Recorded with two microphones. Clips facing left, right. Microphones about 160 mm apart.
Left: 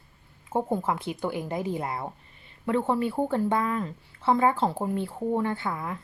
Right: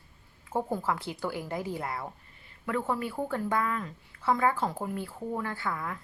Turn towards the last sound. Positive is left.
turn(degrees=25)  # may be behind; listen again after turning